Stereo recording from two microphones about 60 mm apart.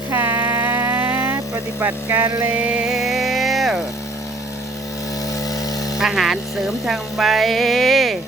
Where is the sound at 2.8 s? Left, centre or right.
Centre.